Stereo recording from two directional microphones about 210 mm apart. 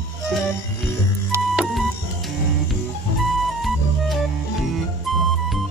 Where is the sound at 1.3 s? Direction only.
5° right (ahead or behind).